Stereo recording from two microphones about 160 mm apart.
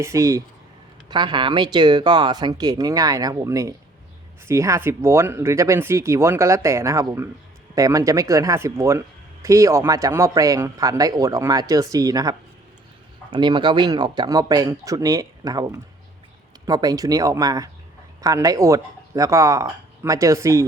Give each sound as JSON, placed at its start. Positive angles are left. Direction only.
{"t": 0.0, "sound": "speech", "side_deg": -20}